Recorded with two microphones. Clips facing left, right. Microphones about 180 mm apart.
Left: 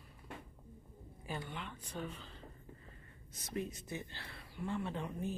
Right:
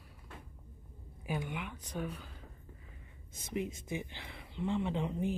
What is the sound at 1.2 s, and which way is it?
Speech, 10° right (ahead or behind).